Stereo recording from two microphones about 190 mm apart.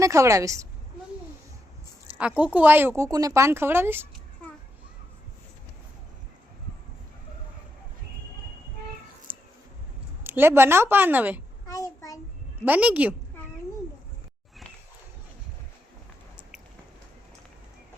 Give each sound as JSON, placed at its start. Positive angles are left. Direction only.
{"t": 0.0, "sound": "speech", "side_deg": -15}
{"t": 2.1, "sound": "speech", "side_deg": -5}
{"t": 9.3, "sound": "a sound", "side_deg": -30}
{"t": 10.2, "sound": "speech", "side_deg": -10}
{"t": 11.6, "sound": "child singing", "side_deg": 15}
{"t": 12.6, "sound": "speech", "side_deg": -10}